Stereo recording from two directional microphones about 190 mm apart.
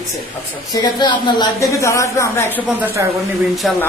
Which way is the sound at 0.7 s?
20° left (ahead or behind).